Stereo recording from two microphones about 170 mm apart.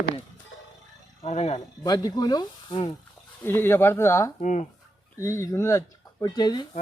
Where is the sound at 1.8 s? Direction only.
20° left (ahead or behind).